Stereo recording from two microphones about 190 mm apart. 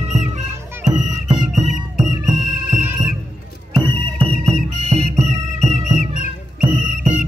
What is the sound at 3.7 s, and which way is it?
Music, 30° right (ahead or behind).